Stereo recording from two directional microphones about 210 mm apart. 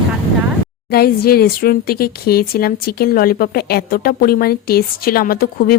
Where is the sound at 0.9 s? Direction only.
45° left (ahead or behind).